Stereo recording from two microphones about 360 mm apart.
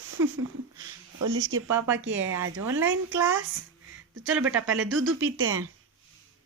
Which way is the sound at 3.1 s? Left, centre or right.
Centre.